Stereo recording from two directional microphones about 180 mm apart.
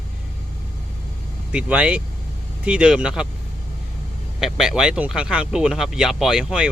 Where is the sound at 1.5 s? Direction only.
5° right (ahead or behind).